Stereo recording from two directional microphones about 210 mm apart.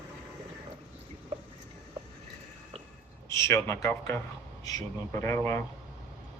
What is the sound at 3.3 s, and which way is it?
Speech, 15° left (ahead or behind).